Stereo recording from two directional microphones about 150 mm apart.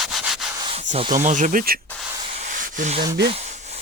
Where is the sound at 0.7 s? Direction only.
55° right (ahead or behind).